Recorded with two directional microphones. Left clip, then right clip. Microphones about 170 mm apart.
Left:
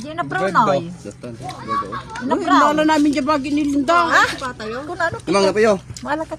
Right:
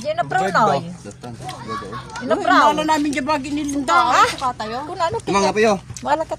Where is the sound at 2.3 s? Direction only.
35° right (ahead or behind).